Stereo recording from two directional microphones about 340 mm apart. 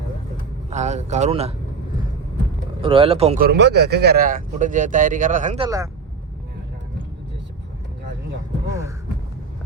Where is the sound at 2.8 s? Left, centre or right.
Centre.